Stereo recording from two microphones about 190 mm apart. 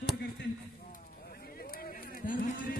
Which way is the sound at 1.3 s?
50° left (ahead or behind).